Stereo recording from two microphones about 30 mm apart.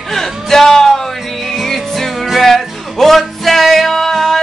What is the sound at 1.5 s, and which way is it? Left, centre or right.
Music, centre.